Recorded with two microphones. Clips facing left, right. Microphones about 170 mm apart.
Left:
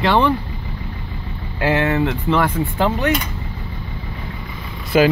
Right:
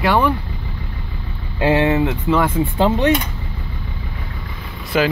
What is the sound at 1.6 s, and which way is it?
Speech, 20° right (ahead or behind).